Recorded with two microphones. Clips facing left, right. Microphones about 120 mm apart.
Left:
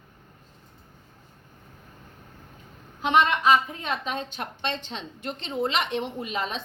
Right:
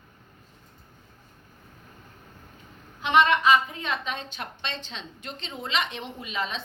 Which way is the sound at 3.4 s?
40° left (ahead or behind).